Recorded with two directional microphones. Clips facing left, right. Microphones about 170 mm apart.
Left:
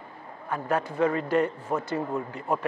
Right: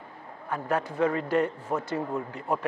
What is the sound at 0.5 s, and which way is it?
Speech, 20° left (ahead or behind).